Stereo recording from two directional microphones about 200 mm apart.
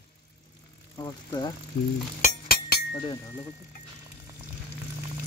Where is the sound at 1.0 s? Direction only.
20° left (ahead or behind).